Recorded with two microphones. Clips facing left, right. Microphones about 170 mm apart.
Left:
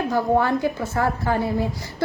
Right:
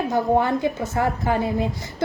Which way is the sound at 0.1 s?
20° right (ahead or behind).